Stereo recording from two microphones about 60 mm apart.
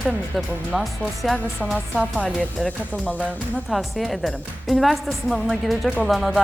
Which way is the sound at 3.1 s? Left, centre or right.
Left.